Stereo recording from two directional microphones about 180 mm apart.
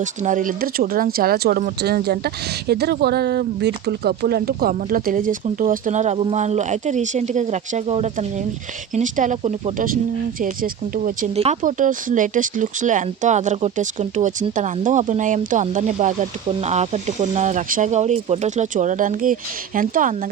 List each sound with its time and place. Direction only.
0.0 s speech: 45° right (ahead or behind)